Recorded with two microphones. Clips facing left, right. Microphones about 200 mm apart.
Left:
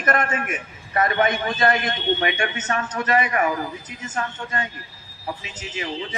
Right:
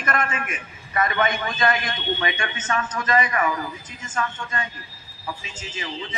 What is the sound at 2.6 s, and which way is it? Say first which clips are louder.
Speech: left 1 dB; 40° left (ahead or behind).